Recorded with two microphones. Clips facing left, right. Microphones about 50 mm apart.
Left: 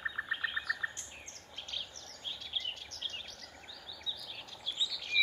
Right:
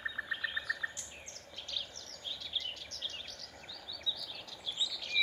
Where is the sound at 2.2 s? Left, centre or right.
Left.